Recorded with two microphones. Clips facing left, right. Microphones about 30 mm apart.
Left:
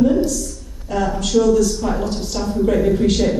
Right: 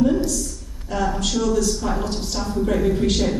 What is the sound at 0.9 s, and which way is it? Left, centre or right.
A woman's voice, centre.